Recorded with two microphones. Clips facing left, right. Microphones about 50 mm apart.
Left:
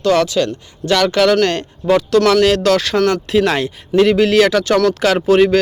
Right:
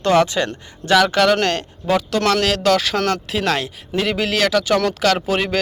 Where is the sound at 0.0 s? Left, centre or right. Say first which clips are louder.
Left 2 dB; right.